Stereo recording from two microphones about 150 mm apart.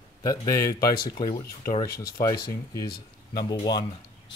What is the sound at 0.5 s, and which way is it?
Speech, 75° left (ahead or behind).